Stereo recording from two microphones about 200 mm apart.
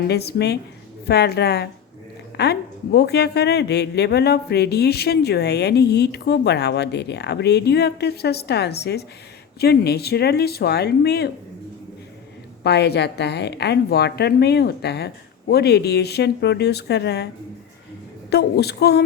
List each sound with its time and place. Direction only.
0.1 s a woman's voice: 55° left (ahead or behind)
12.6 s a woman's voice: 55° left (ahead or behind)
18.3 s speech: 55° left (ahead or behind)